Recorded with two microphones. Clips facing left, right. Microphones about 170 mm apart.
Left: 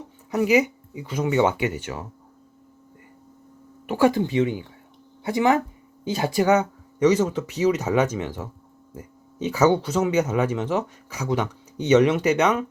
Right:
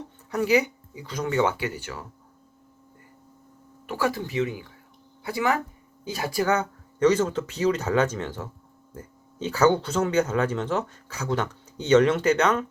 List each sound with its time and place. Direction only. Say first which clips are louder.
0.3 s speech: left 3 dB; 15° left (ahead or behind)
3.8 s speech: left 7 dB; 20° left (ahead or behind)